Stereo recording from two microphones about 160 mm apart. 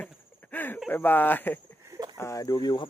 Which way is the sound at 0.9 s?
10° left (ahead or behind).